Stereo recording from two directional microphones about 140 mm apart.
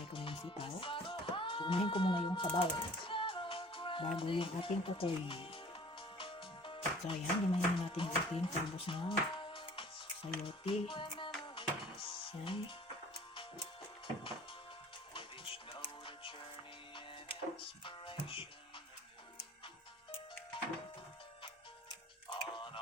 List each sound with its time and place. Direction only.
0.1 s music: 40° left (ahead or behind)
8.4 s speech: 40° left (ahead or behind)
11.4 s music: 40° left (ahead or behind)
15.1 s music: 40° left (ahead or behind)
17.6 s music: 35° left (ahead or behind)
22.3 s music: 35° left (ahead or behind)